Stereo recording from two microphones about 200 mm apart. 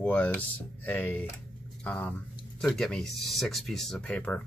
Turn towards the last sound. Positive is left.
turn(degrees=5)  # may be behind; listen again after turning